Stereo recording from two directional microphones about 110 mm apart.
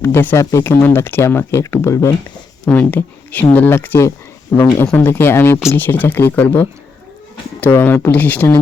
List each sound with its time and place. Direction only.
0.0 s speech: 20° left (ahead or behind)
2.6 s speech: 15° left (ahead or behind)